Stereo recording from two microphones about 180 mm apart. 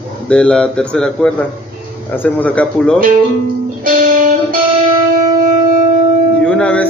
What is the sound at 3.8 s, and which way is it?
Music, 55° right (ahead or behind).